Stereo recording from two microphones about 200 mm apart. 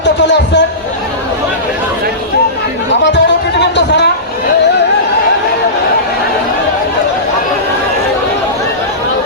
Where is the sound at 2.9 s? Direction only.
60° left (ahead or behind).